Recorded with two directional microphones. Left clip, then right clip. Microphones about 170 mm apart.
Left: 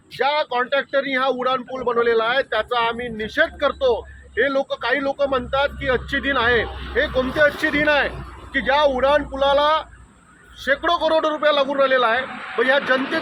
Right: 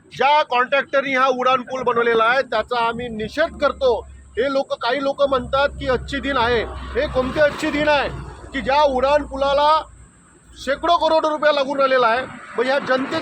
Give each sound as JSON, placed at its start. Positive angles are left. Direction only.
{"t": 0.2, "sound": "a man's voice", "side_deg": -5}